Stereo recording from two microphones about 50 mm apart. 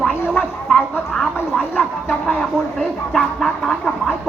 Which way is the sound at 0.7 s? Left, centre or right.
Centre.